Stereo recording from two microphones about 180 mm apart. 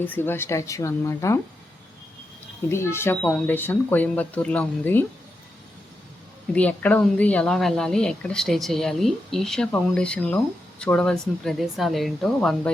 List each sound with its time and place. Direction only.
0.0 s speech: 10° left (ahead or behind)
2.6 s speech: 15° left (ahead or behind)
6.5 s speech: 10° left (ahead or behind)